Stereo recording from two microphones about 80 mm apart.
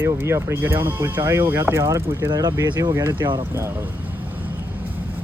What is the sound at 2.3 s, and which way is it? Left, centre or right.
Speech, right.